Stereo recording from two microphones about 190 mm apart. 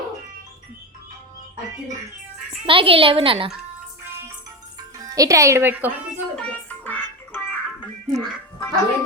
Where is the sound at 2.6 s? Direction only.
30° right (ahead or behind).